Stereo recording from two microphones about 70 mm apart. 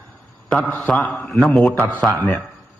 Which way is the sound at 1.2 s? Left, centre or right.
Centre.